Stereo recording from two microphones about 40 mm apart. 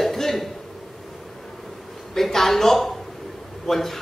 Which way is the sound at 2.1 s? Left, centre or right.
Centre.